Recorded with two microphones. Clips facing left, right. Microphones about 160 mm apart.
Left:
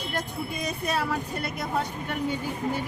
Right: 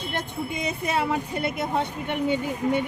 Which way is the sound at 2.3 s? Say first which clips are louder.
Right 6 dB; 70° right (ahead or behind).